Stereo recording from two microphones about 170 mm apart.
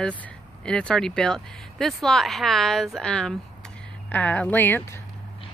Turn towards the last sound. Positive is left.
turn(degrees=10)  # may be behind; listen again after turning